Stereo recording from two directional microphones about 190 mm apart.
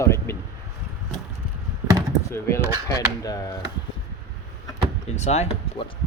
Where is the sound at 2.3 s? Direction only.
15° left (ahead or behind).